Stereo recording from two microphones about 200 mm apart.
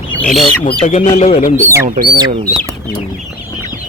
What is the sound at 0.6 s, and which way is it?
Speech, 35° left (ahead or behind).